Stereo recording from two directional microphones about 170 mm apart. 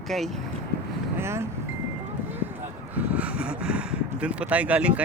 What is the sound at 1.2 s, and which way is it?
Speech, 15° right (ahead or behind).